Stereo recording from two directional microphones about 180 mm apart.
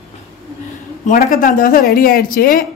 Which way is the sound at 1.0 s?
50° left (ahead or behind).